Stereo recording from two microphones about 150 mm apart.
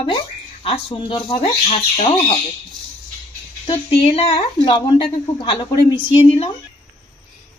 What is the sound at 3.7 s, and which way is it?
A woman's voice, 40° left (ahead or behind).